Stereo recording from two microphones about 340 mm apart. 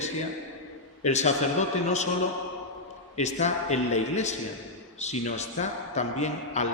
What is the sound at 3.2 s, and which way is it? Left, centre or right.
A man's voice, centre.